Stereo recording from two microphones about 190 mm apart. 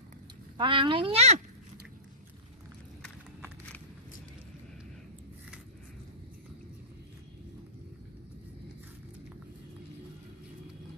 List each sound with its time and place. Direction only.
0.6 s speech: 25° right (ahead or behind)